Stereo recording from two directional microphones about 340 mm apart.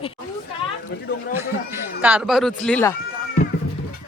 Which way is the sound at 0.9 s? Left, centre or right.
Left.